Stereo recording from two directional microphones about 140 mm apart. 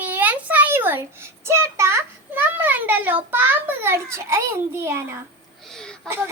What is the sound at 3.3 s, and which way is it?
A child's voice, 15° right (ahead or behind).